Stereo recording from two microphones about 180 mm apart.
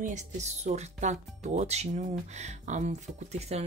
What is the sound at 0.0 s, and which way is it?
Speech, 40° right (ahead or behind).